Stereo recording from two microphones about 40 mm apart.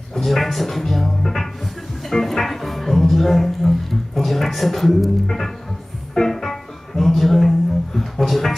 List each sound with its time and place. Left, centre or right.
0.1 s music: centre